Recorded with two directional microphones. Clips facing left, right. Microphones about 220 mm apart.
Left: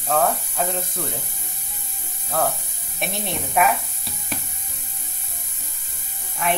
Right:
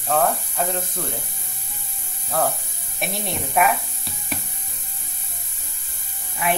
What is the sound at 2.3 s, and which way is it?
Speech, centre (ahead or behind).